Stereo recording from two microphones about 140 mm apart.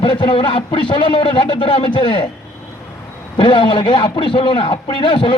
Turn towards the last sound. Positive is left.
turn(degrees=35)  # may be behind; listen again after turning